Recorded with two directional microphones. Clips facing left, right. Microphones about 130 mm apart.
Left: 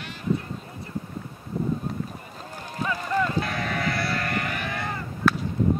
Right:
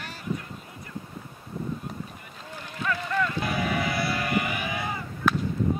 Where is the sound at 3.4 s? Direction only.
5° right (ahead or behind).